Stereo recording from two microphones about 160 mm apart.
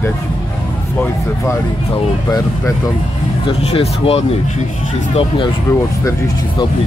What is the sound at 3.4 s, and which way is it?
Speech, 35° left (ahead or behind).